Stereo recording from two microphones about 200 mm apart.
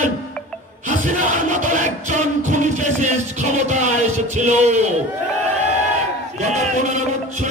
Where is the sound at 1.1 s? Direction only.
40° right (ahead or behind).